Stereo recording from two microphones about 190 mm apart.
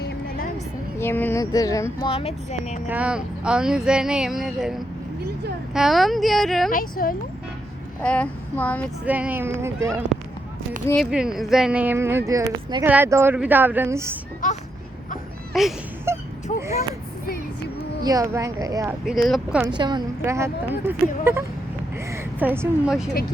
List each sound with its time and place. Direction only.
0.9 s speech: 10° left (ahead or behind)
2.0 s speech: 30° left (ahead or behind)
2.8 s speech: 5° right (ahead or behind)
6.7 s speech: 50° left (ahead or behind)
8.0 s child singing: 5° left (ahead or behind)
9.0 s a woman's voice: 10° right (ahead or behind)
10.9 s a woman's voice: 5° right (ahead or behind)
14.4 s speech: 45° left (ahead or behind)
15.5 s speech: centre (ahead or behind)
16.1 s wail: 15° right (ahead or behind)
16.5 s a sound: 35° left (ahead or behind)
18.0 s a woman's voice: 20° right (ahead or behind)
19.0 s speech: centre (ahead or behind)
19.6 s a woman's voice: 25° right (ahead or behind); by 23.0 s 10° right (ahead or behind)